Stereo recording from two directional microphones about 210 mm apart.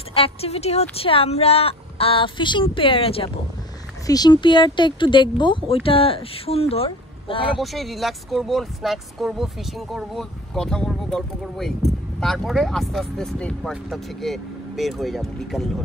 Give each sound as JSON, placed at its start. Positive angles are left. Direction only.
{"t": 0.1, "sound": "speech", "side_deg": 25}
{"t": 7.5, "sound": "speech", "side_deg": 0}